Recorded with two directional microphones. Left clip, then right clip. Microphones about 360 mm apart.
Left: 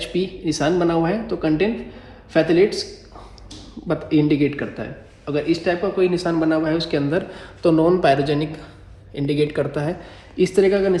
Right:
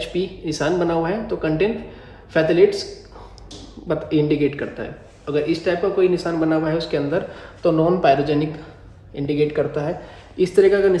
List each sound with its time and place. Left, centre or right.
0.0 s speech: centre
3.8 s speech: centre